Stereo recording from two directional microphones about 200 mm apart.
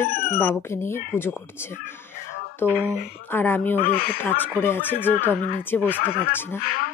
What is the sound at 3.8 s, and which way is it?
Speech, 45° left (ahead or behind).